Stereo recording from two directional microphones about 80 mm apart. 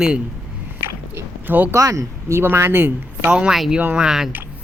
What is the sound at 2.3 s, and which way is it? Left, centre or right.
Speech, right.